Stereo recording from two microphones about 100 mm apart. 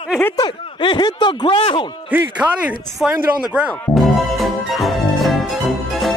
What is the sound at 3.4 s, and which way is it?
Music, 5° right (ahead or behind).